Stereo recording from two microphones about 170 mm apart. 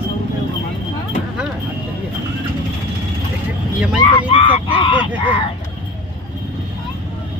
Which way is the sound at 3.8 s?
5° right (ahead or behind).